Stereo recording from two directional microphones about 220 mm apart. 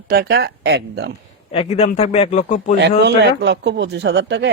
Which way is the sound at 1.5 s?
30° left (ahead or behind).